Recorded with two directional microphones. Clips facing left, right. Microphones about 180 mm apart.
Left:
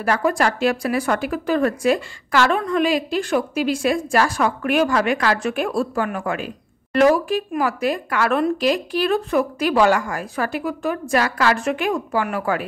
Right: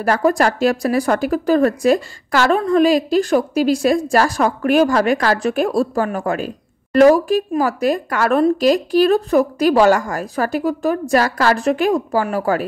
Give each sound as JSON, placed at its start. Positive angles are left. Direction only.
{"t": 0.0, "sound": "a woman's voice", "side_deg": -40}